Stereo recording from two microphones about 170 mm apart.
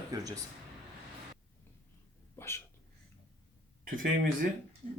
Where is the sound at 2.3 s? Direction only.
15° left (ahead or behind).